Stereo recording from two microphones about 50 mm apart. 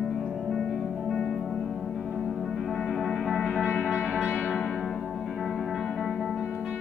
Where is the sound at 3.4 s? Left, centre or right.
Centre.